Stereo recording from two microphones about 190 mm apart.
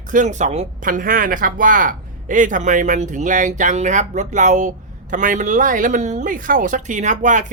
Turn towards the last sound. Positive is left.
turn(degrees=-40)  # may be behind; listen again after turning